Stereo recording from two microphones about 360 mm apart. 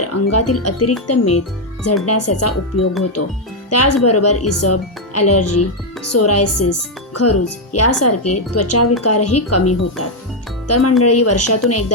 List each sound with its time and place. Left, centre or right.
0.0 s speech: left